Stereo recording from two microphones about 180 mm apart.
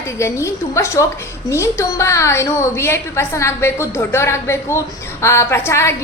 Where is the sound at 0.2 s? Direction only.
15° left (ahead or behind).